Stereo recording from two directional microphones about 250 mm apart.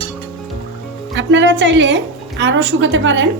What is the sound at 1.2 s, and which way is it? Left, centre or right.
A woman's voice, right.